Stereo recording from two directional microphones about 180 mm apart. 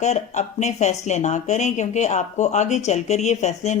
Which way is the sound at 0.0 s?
40° left (ahead or behind).